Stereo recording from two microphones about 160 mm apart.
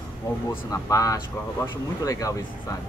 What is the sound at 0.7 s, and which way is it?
Speech, 20° left (ahead or behind).